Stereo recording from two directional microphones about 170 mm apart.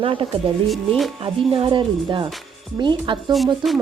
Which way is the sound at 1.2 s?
30° right (ahead or behind).